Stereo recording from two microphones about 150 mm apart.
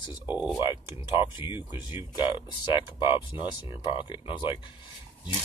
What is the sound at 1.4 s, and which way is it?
Speech, 30° left (ahead or behind).